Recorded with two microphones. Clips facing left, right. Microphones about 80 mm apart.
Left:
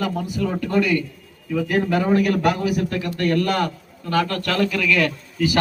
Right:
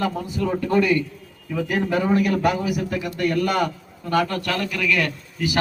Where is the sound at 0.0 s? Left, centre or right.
Right.